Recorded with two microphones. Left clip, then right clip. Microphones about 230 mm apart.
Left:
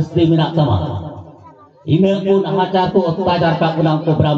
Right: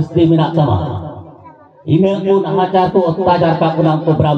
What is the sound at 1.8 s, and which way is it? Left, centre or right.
A man's voice, centre.